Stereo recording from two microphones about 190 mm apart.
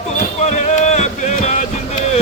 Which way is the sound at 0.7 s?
35° left (ahead or behind).